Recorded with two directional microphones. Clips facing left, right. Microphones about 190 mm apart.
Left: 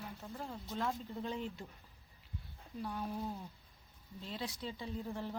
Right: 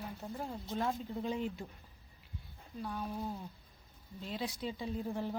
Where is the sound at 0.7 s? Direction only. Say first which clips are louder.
Right 3 dB; 15° right (ahead or behind).